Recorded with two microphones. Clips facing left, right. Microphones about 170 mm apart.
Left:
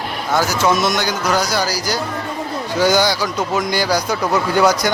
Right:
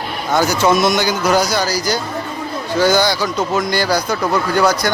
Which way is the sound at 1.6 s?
10° left (ahead or behind).